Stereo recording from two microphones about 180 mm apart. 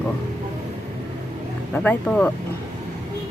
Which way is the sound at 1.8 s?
5° left (ahead or behind).